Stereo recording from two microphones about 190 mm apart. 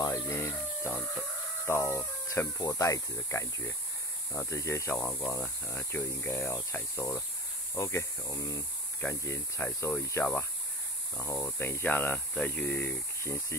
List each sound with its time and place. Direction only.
0.0 s speech: 15° left (ahead or behind)